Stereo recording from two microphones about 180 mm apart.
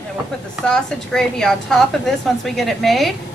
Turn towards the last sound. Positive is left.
turn(degrees=0)  # may be behind; listen again after turning